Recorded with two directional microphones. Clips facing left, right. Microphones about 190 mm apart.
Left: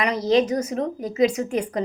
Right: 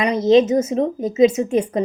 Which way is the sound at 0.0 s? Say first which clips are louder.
Right 6 dB; 20° right (ahead or behind).